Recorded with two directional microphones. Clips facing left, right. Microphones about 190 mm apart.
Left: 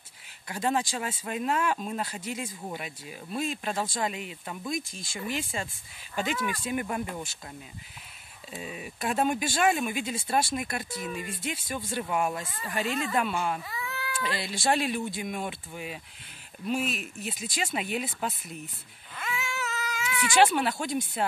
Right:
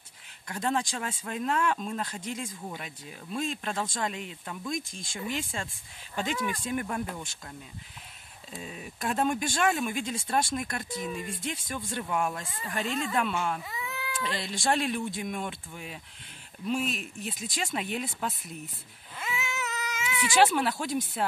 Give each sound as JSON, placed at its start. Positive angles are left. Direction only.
{"t": 0.5, "sound": "speech", "side_deg": 5}
{"t": 8.5, "sound": "speech", "side_deg": 5}
{"t": 13.7, "sound": "cat", "side_deg": -20}
{"t": 14.2, "sound": "speech", "side_deg": 5}
{"t": 19.1, "sound": "cat", "side_deg": -25}
{"t": 20.2, "sound": "speech", "side_deg": 0}